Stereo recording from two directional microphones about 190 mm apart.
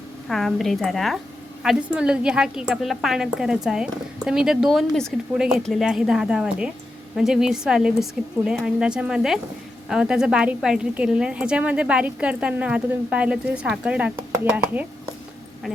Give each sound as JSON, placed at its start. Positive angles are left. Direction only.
{"t": 0.3, "sound": "a woman's voice", "side_deg": 0}